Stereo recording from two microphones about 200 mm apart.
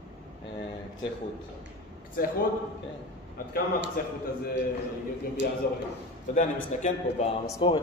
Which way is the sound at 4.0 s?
45° left (ahead or behind).